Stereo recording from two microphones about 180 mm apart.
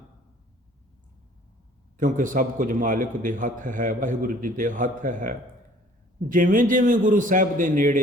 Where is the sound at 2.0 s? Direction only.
45° right (ahead or behind).